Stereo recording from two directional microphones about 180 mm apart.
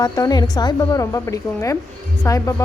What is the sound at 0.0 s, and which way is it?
A woman's voice, 20° left (ahead or behind).